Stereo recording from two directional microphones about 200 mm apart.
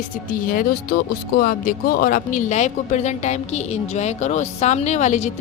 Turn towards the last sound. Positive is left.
turn(degrees=35)  # may be behind; listen again after turning